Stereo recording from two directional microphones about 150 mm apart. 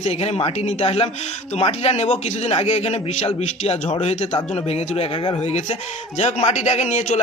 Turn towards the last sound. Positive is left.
turn(degrees=50)  # may be behind; listen again after turning